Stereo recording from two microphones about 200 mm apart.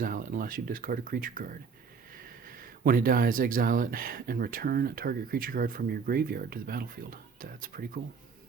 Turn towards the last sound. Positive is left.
turn(degrees=-45)  # may be behind; listen again after turning